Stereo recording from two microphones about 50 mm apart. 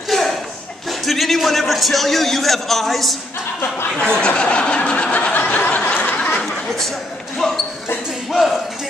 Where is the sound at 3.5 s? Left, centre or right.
Left.